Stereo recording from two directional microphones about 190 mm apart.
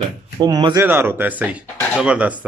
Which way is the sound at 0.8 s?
10° right (ahead or behind).